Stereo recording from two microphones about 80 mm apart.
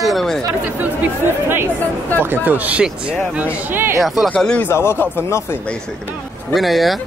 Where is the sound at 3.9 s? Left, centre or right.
Centre.